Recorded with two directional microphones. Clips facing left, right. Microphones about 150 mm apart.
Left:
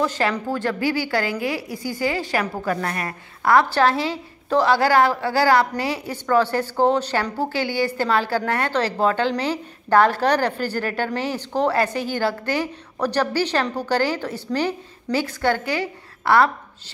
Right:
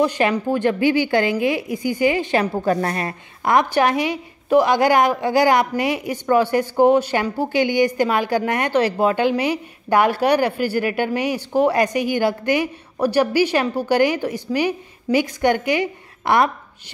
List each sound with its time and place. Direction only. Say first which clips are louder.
0.0 s a woman's voice: right 4 dB; 15° right (ahead or behind)